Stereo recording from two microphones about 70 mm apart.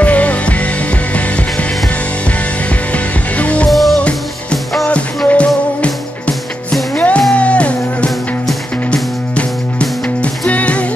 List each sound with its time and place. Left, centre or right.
0.0 s music: centre
2.9 s music: centre
3.7 s music: centre
4.8 s music: centre